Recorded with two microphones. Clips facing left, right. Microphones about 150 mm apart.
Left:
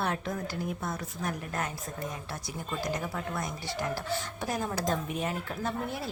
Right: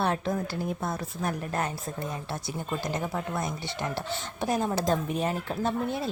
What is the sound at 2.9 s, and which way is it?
Speech, 25° right (ahead or behind).